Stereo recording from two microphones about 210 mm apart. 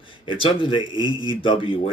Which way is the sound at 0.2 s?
25° left (ahead or behind).